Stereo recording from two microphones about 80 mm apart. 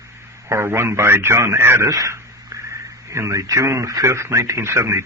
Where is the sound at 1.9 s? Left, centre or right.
Right.